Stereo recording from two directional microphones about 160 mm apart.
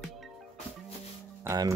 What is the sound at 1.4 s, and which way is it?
Speech, 20° right (ahead or behind).